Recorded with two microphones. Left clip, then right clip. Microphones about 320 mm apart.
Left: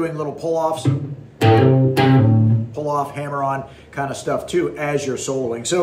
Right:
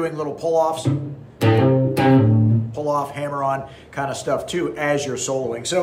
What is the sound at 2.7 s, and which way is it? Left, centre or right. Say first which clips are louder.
Speech: left 1 dB; centre.